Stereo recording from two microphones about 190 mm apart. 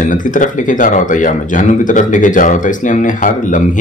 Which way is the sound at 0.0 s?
45° left (ahead or behind).